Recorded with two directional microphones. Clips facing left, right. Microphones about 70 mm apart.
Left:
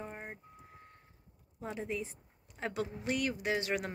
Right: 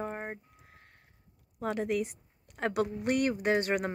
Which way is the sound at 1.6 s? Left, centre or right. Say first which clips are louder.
Right 8 dB; right.